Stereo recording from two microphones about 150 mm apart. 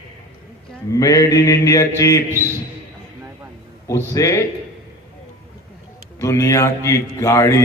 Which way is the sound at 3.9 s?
20° left (ahead or behind).